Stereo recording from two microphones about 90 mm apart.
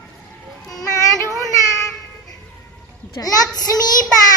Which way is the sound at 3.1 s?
45° left (ahead or behind).